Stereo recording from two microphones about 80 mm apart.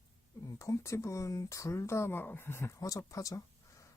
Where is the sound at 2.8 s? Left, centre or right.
Left.